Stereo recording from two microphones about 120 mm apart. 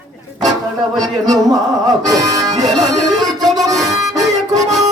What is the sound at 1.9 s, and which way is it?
Music, 30° right (ahead or behind).